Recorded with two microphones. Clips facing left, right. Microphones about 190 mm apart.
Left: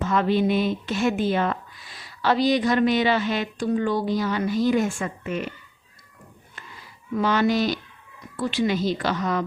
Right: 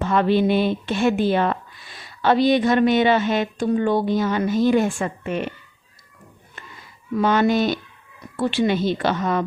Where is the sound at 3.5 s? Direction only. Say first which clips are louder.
Right 2 dB; 25° right (ahead or behind).